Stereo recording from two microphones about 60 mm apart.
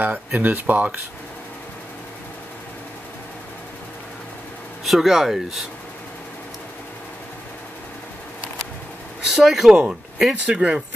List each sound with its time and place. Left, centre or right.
0.0 s speech: right
4.8 s speech: centre
9.3 s speech: centre